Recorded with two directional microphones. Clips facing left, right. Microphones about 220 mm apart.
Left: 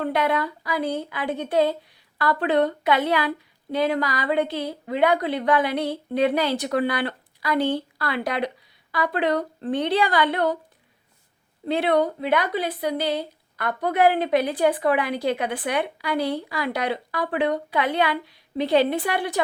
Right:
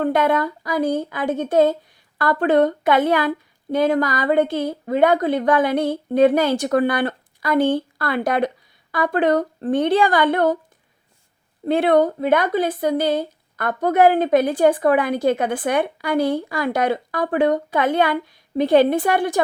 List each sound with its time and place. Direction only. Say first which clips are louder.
0.0 s a woman's voice: right 5 dB; 50° right (ahead or behind)
11.6 s a woman's voice: right 5 dB; 50° right (ahead or behind)